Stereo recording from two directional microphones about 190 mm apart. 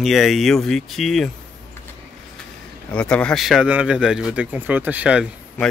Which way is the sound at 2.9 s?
5° left (ahead or behind).